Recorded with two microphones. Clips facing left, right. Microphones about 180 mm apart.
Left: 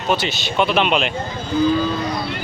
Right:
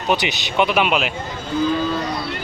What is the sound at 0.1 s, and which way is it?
Speech, 15° right (ahead or behind).